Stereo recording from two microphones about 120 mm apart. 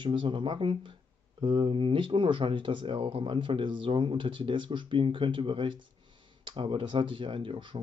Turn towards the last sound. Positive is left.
turn(degrees=-45)  # may be behind; listen again after turning